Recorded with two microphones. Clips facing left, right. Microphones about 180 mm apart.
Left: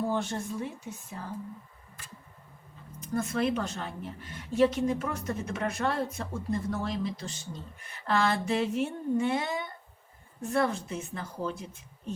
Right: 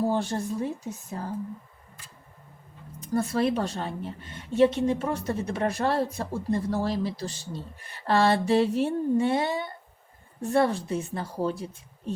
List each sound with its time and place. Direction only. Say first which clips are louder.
0.0 s a sound: right 4 dB; 35° right (ahead or behind)
0.9 s a woman's voice: right 6 dB; 40° right (ahead or behind)
3.1 s a woman's voice: right 4 dB; 35° right (ahead or behind)